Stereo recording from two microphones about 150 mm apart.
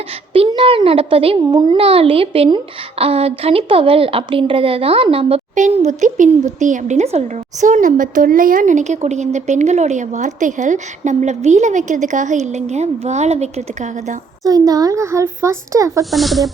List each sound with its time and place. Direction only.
0.3 s speech: 35° right (ahead or behind)
5.5 s speech: 50° right (ahead or behind)
14.4 s speech: 25° right (ahead or behind)
16.1 s speech: centre (ahead or behind)